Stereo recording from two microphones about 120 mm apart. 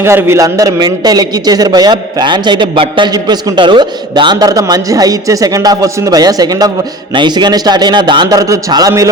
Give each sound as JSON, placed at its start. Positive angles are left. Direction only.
{"t": 0.0, "sound": "a man's voice", "side_deg": -20}